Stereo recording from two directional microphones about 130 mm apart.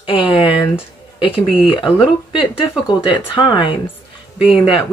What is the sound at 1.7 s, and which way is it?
Speech, 40° left (ahead or behind).